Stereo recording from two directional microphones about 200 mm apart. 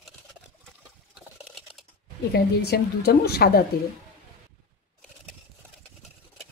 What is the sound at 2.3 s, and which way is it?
A woman's voice, 55° left (ahead or behind).